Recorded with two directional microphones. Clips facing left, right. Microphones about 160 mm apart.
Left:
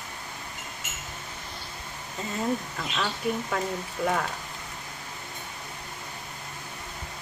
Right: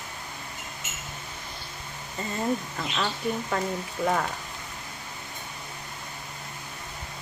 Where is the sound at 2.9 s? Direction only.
5° right (ahead or behind).